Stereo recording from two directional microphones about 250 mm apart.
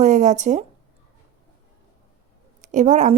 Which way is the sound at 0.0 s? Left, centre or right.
Right.